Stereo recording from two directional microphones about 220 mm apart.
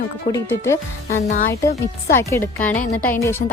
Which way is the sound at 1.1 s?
35° left (ahead or behind).